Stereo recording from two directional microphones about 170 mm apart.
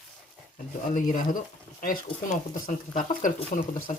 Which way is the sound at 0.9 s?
50° left (ahead or behind).